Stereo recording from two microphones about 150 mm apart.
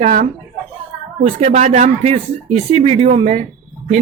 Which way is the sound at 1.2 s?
45° right (ahead or behind).